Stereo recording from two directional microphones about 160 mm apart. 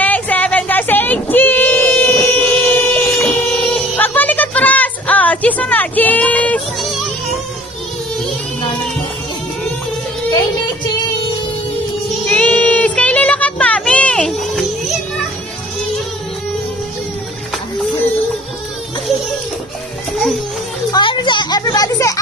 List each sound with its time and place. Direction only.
0.0 s child singing: 10° left (ahead or behind)
12.3 s child singing: 5° left (ahead or behind)
20.9 s children playing: 30° left (ahead or behind)